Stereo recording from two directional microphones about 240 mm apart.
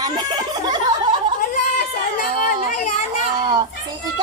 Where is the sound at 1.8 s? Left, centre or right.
Left.